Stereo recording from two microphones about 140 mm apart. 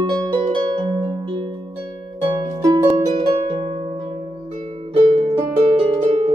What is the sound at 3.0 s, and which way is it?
Harp, 40° right (ahead or behind).